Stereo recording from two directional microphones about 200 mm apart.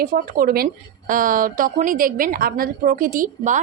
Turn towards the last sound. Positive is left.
turn(degrees=-40)  # may be behind; listen again after turning